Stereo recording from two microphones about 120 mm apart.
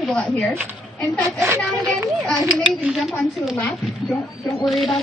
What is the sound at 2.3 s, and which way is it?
Speech, centre (ahead or behind).